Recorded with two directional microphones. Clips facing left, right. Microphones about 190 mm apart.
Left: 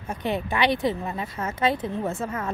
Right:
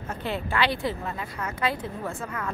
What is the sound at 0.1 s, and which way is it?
A woman's voice, 15° left (ahead or behind).